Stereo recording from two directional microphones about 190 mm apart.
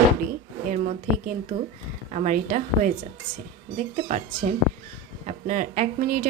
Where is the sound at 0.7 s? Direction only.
40° right (ahead or behind).